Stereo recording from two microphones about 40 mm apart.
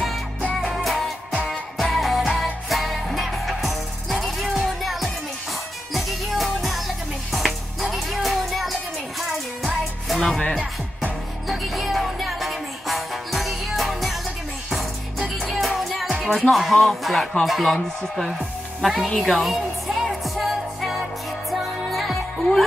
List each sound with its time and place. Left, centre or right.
0.8 s music: centre
10.0 s music: centre
10.3 s music: centre
11.4 s music: centre
16.4 s speech: centre
18.8 s speech: centre
19.0 s a woman's voice: centre
19.3 s music: centre